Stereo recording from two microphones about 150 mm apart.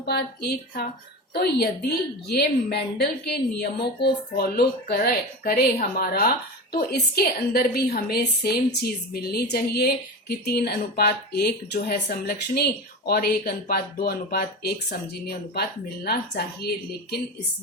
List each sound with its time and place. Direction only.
0.0 s a woman's voice: 90° left